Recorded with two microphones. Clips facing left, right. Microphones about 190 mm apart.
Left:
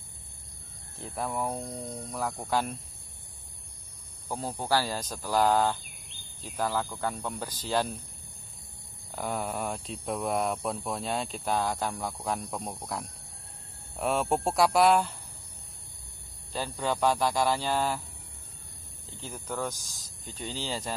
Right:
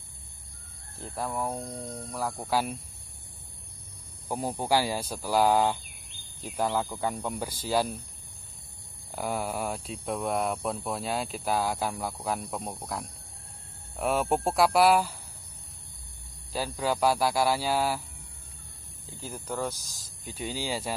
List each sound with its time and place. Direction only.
0.9 s speech: centre (ahead or behind)
4.3 s speech: 15° right (ahead or behind)
9.1 s speech: 5° right (ahead or behind)
16.5 s speech: 5° right (ahead or behind)
19.3 s speech: 5° right (ahead or behind)